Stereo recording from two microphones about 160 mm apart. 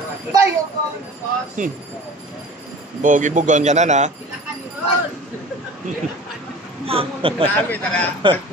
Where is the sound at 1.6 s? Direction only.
50° right (ahead or behind).